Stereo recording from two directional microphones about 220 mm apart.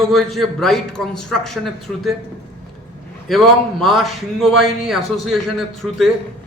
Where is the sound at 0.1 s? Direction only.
Centre (ahead or behind).